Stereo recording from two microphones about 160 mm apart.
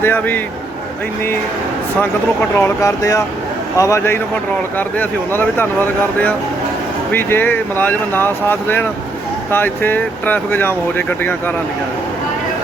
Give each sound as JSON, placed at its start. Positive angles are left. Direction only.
{"t": 0.0, "sound": "speech", "side_deg": 10}
{"t": 2.0, "sound": "speech", "side_deg": 10}